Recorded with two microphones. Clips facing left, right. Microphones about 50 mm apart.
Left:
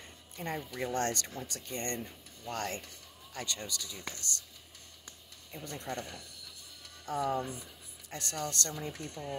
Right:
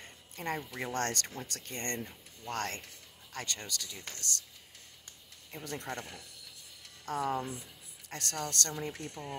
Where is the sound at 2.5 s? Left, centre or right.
Right.